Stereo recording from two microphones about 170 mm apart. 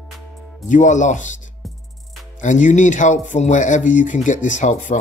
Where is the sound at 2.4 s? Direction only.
45° left (ahead or behind).